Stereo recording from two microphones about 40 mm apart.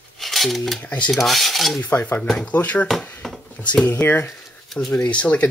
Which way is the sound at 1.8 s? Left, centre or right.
Left.